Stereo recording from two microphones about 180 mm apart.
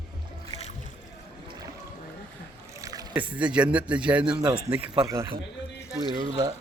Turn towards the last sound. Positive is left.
turn(degrees=-20)  # may be behind; listen again after turning